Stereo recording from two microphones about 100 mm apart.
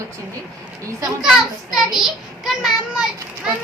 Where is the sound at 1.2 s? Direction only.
5° right (ahead or behind).